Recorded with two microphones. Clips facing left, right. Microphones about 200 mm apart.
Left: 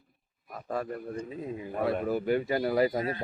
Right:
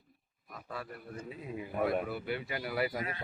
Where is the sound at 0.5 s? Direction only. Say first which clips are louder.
Left 9 dB; 45° left (ahead or behind).